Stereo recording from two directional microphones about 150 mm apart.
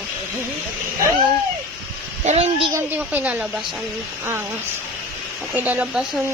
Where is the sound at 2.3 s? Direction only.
45° right (ahead or behind).